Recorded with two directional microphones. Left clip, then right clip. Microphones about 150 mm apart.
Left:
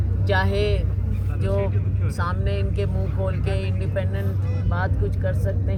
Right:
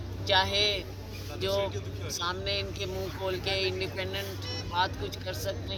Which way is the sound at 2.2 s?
5° left (ahead or behind).